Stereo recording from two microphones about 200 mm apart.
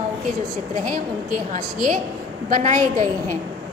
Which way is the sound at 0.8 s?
45° right (ahead or behind).